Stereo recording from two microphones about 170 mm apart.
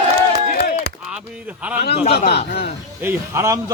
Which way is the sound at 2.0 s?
40° left (ahead or behind).